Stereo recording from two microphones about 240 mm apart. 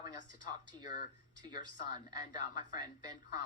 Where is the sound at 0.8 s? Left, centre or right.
Left.